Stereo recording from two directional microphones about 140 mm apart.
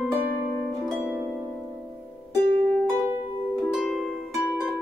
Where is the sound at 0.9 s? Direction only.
10° right (ahead or behind).